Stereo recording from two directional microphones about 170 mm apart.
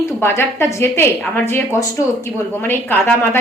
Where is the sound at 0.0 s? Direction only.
15° left (ahead or behind).